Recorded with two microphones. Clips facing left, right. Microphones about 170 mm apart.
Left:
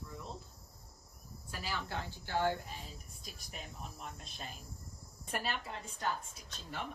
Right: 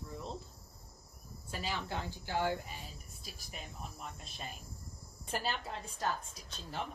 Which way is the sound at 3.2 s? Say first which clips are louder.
Right 1 dB; centre (ahead or behind).